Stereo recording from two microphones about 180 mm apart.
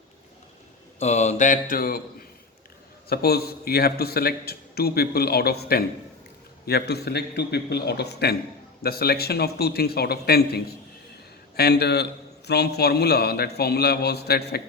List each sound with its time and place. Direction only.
0.9 s mantra: 40° left (ahead or behind)
3.1 s a man's voice: 60° left (ahead or behind)